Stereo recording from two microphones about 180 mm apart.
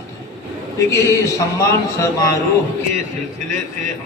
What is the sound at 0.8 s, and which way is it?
A man's voice, 15° left (ahead or behind).